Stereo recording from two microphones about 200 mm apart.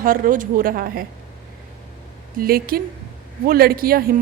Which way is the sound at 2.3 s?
45° right (ahead or behind).